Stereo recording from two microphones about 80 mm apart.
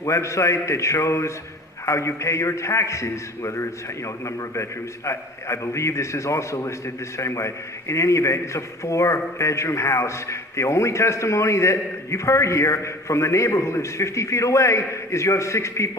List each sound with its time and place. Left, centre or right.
0.0 s a man's voice: left